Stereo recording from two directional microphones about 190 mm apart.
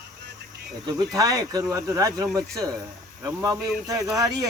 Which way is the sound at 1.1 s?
20° right (ahead or behind).